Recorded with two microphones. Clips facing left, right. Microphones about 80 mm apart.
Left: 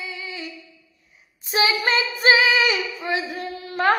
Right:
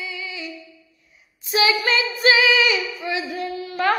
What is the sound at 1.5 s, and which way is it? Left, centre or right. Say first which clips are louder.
Female singing: right 1 dB; left.